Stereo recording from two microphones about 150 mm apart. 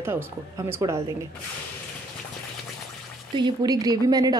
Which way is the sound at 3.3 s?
30° right (ahead or behind).